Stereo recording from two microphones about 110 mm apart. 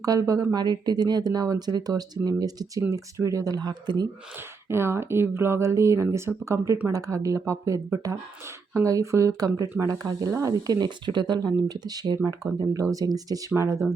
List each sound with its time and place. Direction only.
0.0 s speech: 30° right (ahead or behind)
4.7 s speech: 20° right (ahead or behind)